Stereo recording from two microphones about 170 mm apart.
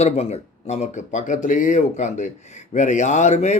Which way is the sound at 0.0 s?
40° left (ahead or behind).